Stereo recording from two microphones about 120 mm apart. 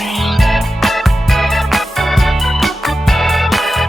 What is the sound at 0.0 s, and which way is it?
Music, centre (ahead or behind).